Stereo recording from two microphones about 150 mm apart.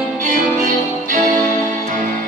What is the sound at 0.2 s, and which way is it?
Music, 60° right (ahead or behind).